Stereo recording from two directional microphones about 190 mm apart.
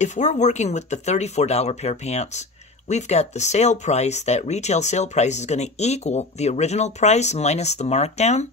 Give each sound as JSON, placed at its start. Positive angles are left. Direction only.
{"t": 0.0, "sound": "speech", "side_deg": 40}